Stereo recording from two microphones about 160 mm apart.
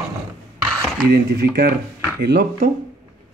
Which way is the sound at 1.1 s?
80° right.